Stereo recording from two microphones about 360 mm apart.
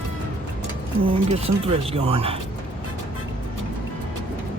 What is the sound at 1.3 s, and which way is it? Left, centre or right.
Speech, centre.